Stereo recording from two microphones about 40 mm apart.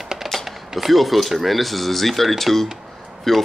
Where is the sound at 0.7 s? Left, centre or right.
Centre.